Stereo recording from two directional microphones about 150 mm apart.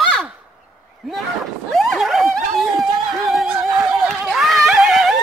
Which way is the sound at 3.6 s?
20° right (ahead or behind).